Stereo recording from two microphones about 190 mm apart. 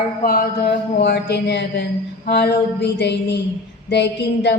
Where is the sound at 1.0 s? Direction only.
65° left (ahead or behind).